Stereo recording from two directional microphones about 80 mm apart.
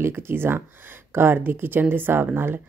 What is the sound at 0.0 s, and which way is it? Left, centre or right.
Speech, right.